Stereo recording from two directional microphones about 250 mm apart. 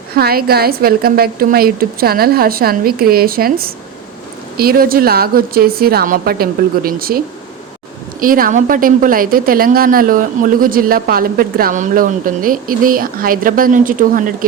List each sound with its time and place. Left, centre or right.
0.1 s a woman's voice: right
8.2 s a woman's voice: right